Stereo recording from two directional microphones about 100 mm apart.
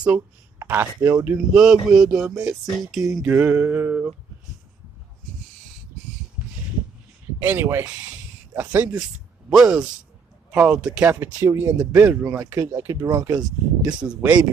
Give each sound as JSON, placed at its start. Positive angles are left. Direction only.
{"t": 0.7, "sound": "speech", "side_deg": -20}
{"t": 1.6, "sound": "a sound", "side_deg": -5}
{"t": 3.3, "sound": "speech", "side_deg": -20}
{"t": 7.4, "sound": "speech", "side_deg": -25}
{"t": 9.5, "sound": "speech", "side_deg": -5}
{"t": 10.5, "sound": "a sound", "side_deg": -10}
{"t": 11.1, "sound": "speech", "side_deg": -25}
{"t": 11.8, "sound": "speech", "side_deg": -10}
{"t": 12.7, "sound": "speech", "side_deg": -35}
{"t": 14.0, "sound": "a sound", "side_deg": -15}